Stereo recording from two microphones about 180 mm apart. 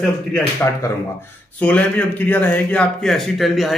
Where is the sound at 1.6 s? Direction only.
10° left (ahead or behind).